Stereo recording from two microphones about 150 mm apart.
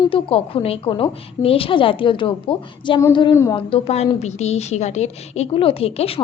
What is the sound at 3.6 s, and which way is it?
A woman's voice, 40° left (ahead or behind).